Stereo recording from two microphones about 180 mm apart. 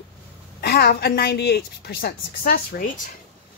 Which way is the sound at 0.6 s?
60° left (ahead or behind).